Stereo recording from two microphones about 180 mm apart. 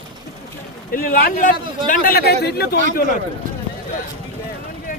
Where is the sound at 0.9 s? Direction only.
55° left (ahead or behind).